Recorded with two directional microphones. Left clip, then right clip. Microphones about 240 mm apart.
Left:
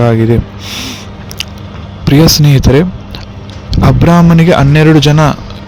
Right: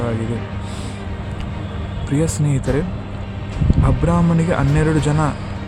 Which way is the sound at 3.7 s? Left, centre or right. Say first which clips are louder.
Left 11 dB; left.